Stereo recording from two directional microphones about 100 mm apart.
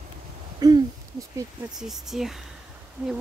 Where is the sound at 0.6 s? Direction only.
40° right (ahead or behind).